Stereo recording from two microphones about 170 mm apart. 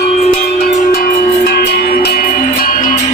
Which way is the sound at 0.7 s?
45° left (ahead or behind).